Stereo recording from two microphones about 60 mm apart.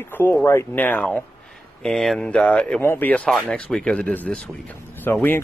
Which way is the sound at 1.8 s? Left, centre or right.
Centre.